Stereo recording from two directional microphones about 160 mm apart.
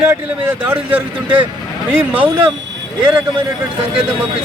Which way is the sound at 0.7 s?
10° right (ahead or behind).